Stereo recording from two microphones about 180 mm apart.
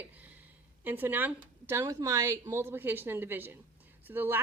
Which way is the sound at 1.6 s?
15° right (ahead or behind).